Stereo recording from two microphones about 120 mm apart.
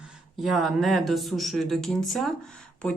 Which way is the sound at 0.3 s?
Centre (ahead or behind).